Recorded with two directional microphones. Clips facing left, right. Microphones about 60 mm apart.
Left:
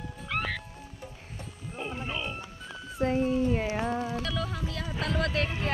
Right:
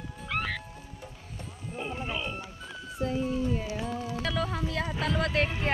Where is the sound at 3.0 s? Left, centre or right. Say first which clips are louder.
Left 4 dB; left.